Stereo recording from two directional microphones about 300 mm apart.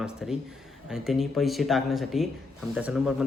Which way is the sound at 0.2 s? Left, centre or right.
Centre.